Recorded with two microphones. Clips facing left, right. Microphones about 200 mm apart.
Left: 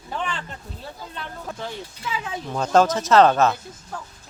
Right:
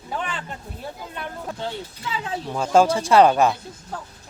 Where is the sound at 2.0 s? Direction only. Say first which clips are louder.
Right 1 dB; 30° right (ahead or behind).